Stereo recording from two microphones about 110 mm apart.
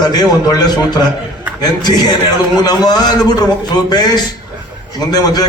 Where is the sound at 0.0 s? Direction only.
35° left (ahead or behind).